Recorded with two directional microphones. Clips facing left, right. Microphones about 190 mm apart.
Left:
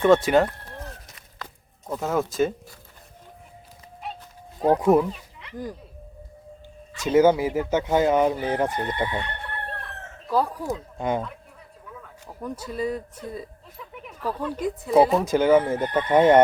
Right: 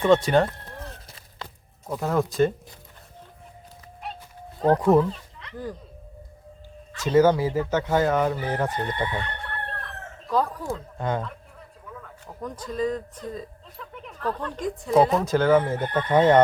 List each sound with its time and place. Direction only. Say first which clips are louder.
0.0 s speech: left 1 dB; 5° left (ahead or behind)
1.0 s a sound: right 1 dB; 30° right (ahead or behind)
1.9 s speech: right 1 dB; centre (ahead or behind)
4.0 s dog: left 1 dB; centre (ahead or behind)
4.6 s speech: even; 10° left (ahead or behind)
6.9 s speech: left 1 dB; 10° left (ahead or behind)